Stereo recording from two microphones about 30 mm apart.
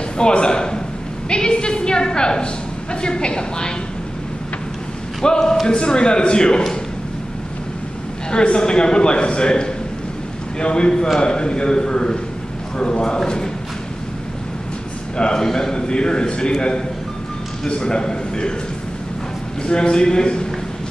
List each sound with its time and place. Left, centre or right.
0.2 s a woman's voice: left
5.4 s a man's voice: centre
5.7 s a woman's voice: left
8.3 s a woman's voice: left
15.1 s a woman's voice: left
15.4 s a man's voice: centre
15.7 s a woman's voice: left
19.6 s a woman's voice: left